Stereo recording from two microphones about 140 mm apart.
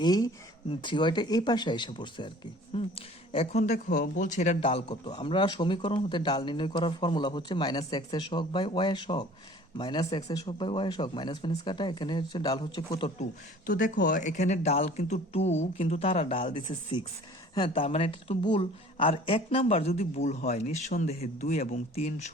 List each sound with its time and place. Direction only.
0.0 s a man's voice: 30° left (ahead or behind)
2.7 s speech: 45° left (ahead or behind)
4.6 s a man's voice: 40° left (ahead or behind)
13.7 s speech: 70° left (ahead or behind); by 22.1 s 50° left (ahead or behind)